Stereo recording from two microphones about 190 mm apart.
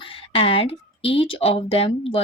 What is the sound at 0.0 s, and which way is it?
A woman's voice, 30° left (ahead or behind).